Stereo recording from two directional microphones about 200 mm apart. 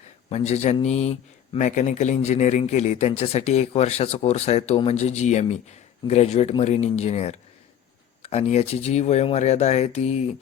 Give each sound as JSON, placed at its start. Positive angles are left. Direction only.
{"t": 0.3, "sound": "a man's voice", "side_deg": 35}